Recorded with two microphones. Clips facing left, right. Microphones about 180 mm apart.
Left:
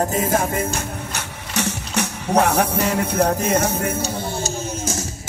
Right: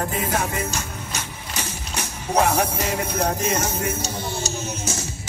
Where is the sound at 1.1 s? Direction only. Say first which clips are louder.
Left 5 dB; 70° left (ahead or behind).